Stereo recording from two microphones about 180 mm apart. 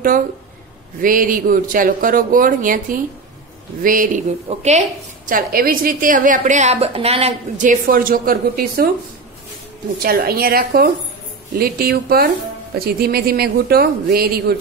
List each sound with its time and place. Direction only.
1.0 s a woman's voice: 50° right (ahead or behind)
10.0 s speech: 55° right (ahead or behind)